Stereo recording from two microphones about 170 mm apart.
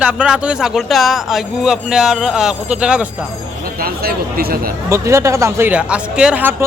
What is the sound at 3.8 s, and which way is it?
Speech, 60° right (ahead or behind).